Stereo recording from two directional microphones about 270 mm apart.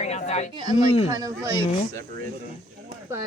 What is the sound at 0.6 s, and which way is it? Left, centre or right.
Speech, centre.